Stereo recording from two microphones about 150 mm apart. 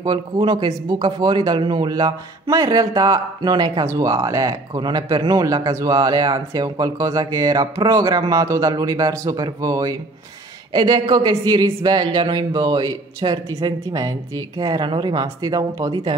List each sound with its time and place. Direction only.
0.0 s speech: 30° right (ahead or behind)